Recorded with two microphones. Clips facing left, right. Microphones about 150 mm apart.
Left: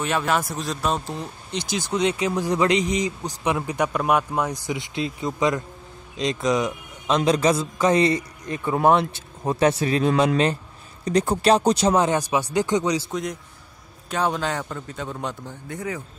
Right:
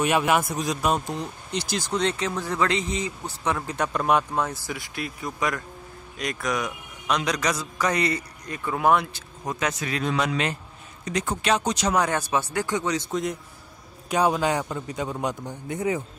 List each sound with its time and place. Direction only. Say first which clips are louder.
0.0 s a man's voice: right 2 dB; 10° right (ahead or behind)
1.8 s a man's voice: left 4 dB; 10° left (ahead or behind); by 12.2 s 25° left (ahead or behind)
12.2 s speech: left 3 dB; 15° left (ahead or behind)
13.1 s a man's voice: right 1 dB; centre (ahead or behind)
14.1 s a man's voice: right 2 dB; 10° right (ahead or behind)